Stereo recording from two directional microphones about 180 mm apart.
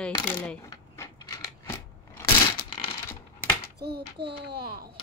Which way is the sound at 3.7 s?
65° right (ahead or behind).